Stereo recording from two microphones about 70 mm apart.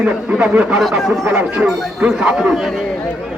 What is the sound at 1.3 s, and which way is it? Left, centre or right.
Speech, right.